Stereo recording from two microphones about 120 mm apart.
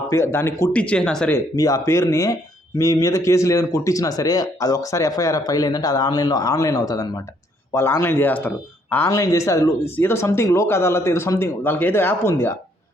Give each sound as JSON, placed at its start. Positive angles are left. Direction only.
{"t": 0.1, "sound": "speech", "side_deg": 20}
{"t": 0.7, "sound": "speech", "side_deg": 10}
{"t": 1.5, "sound": "speech", "side_deg": 30}
{"t": 7.7, "sound": "speech", "side_deg": 20}